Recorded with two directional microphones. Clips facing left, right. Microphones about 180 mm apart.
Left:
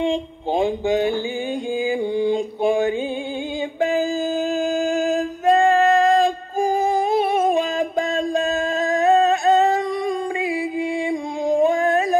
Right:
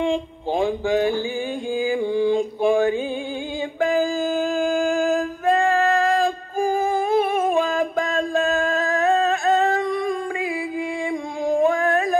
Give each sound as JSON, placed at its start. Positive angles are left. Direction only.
{"t": 0.0, "sound": "speech", "side_deg": 20}
{"t": 1.8, "sound": "mantra", "side_deg": 20}
{"t": 3.8, "sound": "music", "side_deg": 20}
{"t": 8.2, "sound": "a sound", "side_deg": 20}